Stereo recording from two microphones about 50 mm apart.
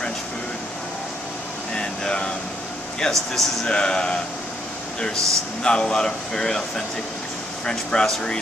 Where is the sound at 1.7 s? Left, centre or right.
Centre.